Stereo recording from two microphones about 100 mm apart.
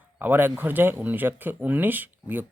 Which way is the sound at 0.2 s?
20° right (ahead or behind).